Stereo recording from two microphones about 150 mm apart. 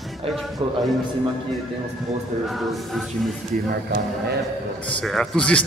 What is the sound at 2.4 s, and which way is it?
Speech, centre (ahead or behind).